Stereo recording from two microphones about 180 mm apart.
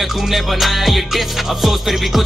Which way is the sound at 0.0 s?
Centre (ahead or behind).